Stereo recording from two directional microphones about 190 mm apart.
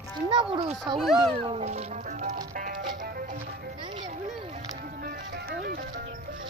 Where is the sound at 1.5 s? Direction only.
35° right (ahead or behind).